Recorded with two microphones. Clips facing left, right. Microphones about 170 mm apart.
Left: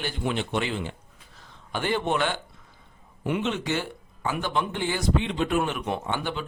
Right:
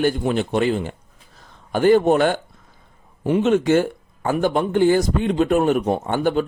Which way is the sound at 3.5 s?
50° right (ahead or behind).